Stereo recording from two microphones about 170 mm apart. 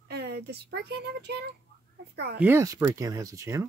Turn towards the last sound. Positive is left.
turn(degrees=-20)  # may be behind; listen again after turning